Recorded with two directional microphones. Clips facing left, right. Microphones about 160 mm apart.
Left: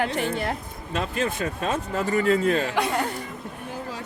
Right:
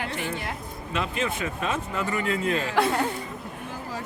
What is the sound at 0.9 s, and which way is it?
Speech, 40° left (ahead or behind).